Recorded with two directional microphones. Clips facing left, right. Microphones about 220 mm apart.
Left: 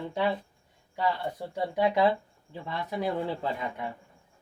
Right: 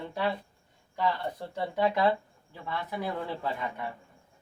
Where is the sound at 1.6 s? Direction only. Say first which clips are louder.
Left 2 dB; 15° left (ahead or behind).